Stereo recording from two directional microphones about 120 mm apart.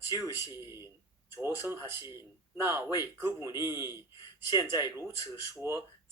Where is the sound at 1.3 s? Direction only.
20° right (ahead or behind).